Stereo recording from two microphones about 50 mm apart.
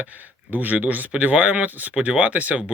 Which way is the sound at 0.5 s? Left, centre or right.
Right.